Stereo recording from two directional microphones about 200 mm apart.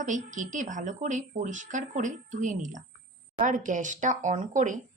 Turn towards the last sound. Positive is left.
turn(degrees=-40)  # may be behind; listen again after turning